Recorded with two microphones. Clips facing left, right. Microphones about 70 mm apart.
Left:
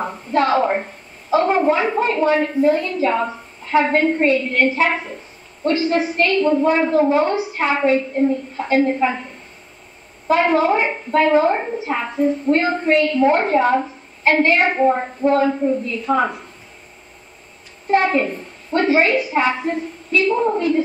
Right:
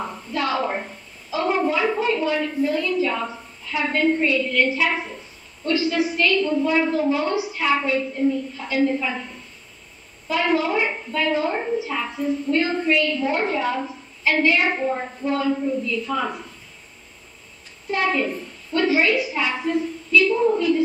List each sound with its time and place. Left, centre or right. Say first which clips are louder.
0.0 s a sound: left 7 dB; left
1.3 s a woman's voice: left 6 dB; left
10.2 s a woman's voice: left 6 dB; left
17.8 s a woman's voice: left 6 dB; left